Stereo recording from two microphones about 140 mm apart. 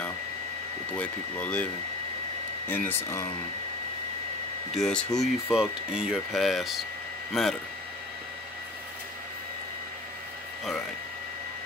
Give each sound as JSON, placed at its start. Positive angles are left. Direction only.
{"t": 0.9, "sound": "speech", "side_deg": 10}
{"t": 2.7, "sound": "speech", "side_deg": 15}
{"t": 4.7, "sound": "speech", "side_deg": 5}